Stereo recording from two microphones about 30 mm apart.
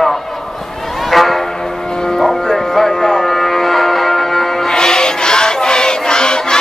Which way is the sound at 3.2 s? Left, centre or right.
Centre.